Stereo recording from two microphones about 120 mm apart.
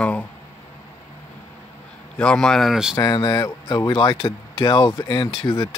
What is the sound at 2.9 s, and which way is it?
Speech, 35° left (ahead or behind).